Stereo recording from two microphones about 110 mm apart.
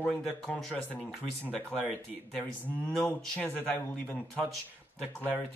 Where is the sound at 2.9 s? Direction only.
10° left (ahead or behind).